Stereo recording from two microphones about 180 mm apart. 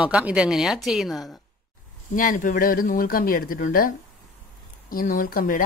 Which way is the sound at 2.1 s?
50° left (ahead or behind).